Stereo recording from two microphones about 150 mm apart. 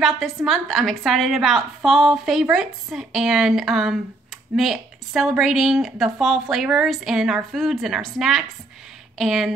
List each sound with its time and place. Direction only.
0.0 s a woman's voice: centre (ahead or behind)